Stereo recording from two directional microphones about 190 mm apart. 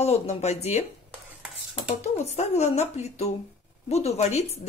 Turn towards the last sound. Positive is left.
turn(degrees=35)  # may be behind; listen again after turning